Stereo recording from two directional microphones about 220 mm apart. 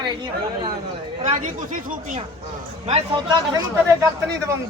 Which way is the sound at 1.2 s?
35° right (ahead or behind).